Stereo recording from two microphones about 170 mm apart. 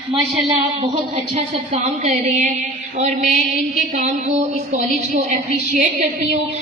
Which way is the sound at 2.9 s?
40° right (ahead or behind).